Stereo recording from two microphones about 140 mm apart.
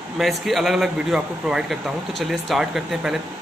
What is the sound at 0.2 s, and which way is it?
A man's voice, centre (ahead or behind).